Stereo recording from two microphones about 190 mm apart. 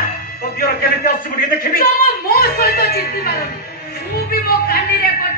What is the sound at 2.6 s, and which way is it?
Speech, 55° left (ahead or behind).